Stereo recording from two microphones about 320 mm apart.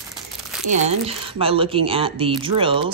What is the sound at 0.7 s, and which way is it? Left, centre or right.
Speech, right.